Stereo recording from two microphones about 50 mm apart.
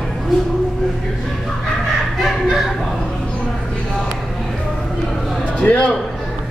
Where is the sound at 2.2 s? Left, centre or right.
Centre.